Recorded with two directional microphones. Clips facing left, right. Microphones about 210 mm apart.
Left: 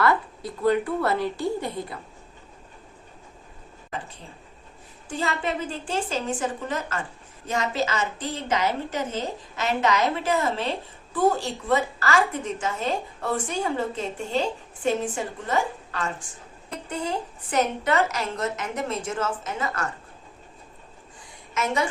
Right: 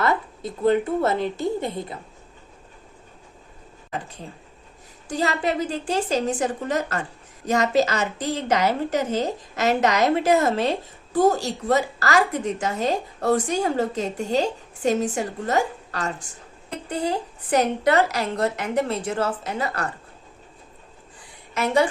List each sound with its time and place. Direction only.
0.0 s a woman's voice: 20° right (ahead or behind)
5.0 s a woman's voice: 40° right (ahead or behind)
21.5 s a woman's voice: 35° right (ahead or behind)